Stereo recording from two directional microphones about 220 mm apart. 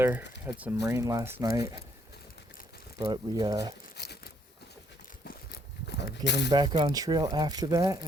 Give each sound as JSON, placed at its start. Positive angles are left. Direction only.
{"t": 0.0, "sound": "speech", "side_deg": -10}
{"t": 3.0, "sound": "speech", "side_deg": -20}
{"t": 3.9, "sound": "a sound", "side_deg": 50}
{"t": 6.5, "sound": "speech", "side_deg": -20}